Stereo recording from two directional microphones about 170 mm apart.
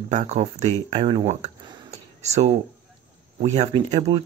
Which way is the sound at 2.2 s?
40° right (ahead or behind).